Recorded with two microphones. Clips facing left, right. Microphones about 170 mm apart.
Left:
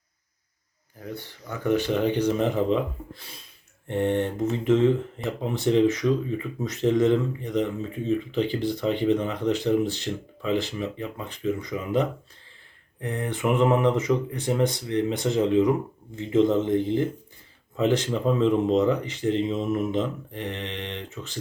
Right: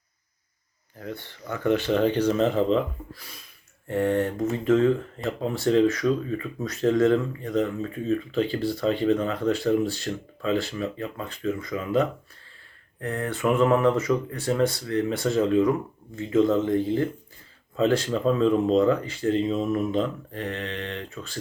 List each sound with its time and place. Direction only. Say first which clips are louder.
0.9 s speech: right 1 dB; 15° left (ahead or behind)
3.2 s speech: even; 25° left (ahead or behind)